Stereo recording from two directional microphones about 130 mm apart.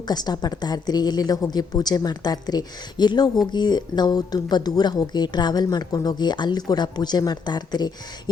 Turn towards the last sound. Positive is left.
turn(degrees=35)  # may be behind; listen again after turning